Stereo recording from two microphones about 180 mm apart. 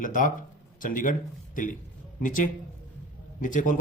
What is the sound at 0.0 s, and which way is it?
Speech, 50° left (ahead or behind).